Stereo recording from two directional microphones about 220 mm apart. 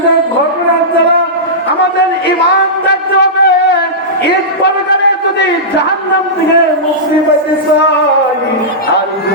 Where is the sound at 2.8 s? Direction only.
50° left (ahead or behind).